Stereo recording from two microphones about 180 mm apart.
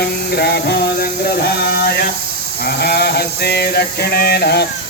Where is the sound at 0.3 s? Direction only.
65° left (ahead or behind).